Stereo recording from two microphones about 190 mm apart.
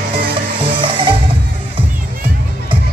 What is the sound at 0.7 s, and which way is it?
Music, 25° right (ahead or behind).